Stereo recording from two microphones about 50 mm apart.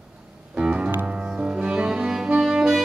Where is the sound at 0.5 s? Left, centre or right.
Centre.